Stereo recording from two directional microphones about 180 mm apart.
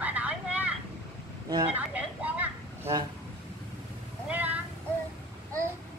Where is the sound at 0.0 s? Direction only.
10° right (ahead or behind).